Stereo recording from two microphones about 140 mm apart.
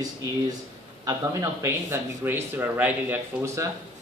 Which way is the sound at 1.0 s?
20° right (ahead or behind).